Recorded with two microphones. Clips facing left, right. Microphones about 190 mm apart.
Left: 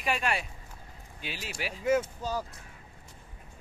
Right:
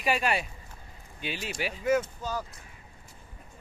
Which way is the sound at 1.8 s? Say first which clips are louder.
Even; 30° left (ahead or behind).